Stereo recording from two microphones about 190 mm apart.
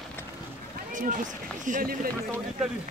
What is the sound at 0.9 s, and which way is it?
Run, 40° right (ahead or behind).